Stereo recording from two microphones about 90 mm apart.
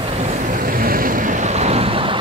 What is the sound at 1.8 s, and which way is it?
Vehicle, 90° right.